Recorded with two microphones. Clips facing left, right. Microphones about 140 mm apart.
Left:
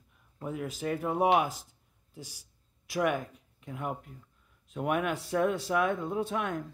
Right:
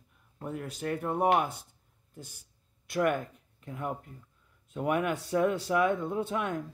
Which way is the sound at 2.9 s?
Centre (ahead or behind).